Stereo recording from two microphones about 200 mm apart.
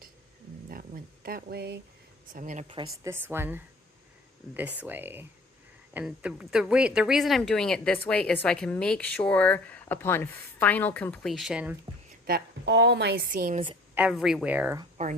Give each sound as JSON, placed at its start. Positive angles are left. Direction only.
{"t": 0.7, "sound": "a sound", "side_deg": -45}
{"t": 2.3, "sound": "speech", "side_deg": -40}
{"t": 3.0, "sound": "speech", "side_deg": -10}
{"t": 4.8, "sound": "speech", "side_deg": -10}
{"t": 12.2, "sound": "a woman's voice", "side_deg": -55}
{"t": 13.9, "sound": "speech", "side_deg": -5}
{"t": 15.0, "sound": "speech", "side_deg": -40}